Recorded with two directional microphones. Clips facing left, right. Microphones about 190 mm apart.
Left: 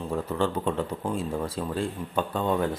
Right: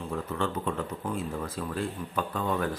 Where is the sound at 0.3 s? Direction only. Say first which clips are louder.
Left 4 dB; 30° left (ahead or behind).